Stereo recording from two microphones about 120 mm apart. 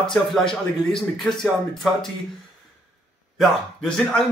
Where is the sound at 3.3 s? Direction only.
5° left (ahead or behind).